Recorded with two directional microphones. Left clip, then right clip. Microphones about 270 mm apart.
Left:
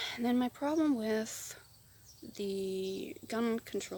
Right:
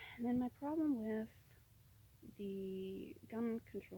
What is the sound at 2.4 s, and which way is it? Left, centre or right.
Speech, left.